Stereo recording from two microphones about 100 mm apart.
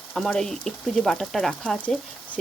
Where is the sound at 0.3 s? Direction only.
5° left (ahead or behind).